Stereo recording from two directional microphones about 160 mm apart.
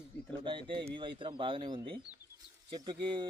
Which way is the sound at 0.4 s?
30° right (ahead or behind).